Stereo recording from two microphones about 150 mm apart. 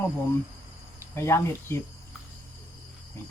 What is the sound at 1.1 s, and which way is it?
Speech, 20° left (ahead or behind).